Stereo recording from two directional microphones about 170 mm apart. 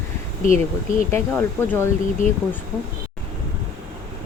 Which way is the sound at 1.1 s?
15° left (ahead or behind).